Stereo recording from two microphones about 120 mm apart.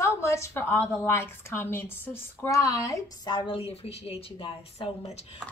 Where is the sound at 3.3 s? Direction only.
45° left (ahead or behind).